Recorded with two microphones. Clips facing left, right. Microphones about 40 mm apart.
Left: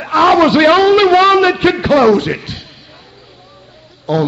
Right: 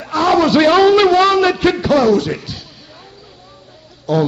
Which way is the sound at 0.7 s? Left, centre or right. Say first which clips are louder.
Left 1 dB; centre.